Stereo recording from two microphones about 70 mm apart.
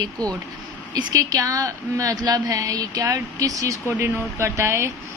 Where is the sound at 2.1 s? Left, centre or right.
Right.